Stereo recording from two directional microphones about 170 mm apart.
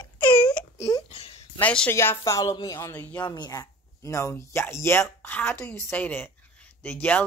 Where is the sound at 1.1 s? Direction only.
35° left (ahead or behind).